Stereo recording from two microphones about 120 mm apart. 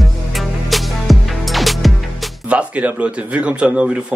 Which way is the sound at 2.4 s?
10° right (ahead or behind).